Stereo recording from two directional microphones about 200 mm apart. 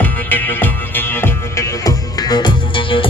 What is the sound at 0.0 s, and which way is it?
Music, 10° left (ahead or behind).